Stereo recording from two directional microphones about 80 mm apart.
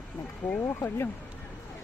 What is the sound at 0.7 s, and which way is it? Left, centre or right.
Speech, left.